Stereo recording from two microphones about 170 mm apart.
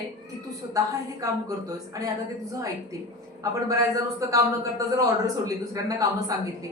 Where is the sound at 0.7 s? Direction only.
20° right (ahead or behind).